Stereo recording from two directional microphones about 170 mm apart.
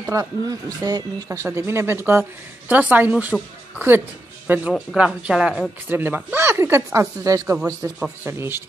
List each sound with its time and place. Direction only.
0.0 s speech: 20° right (ahead or behind)